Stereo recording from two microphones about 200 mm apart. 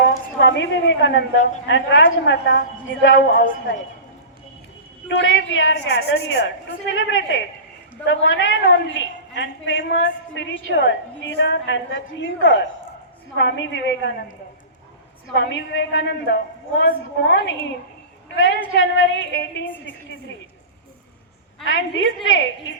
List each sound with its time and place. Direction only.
0.3 s a woman's voice: 65° left (ahead or behind)
5.0 s a woman's voice: 70° left (ahead or behind)
15.4 s a woman's voice: 60° left (ahead or behind)
21.6 s a woman's voice: 70° left (ahead or behind)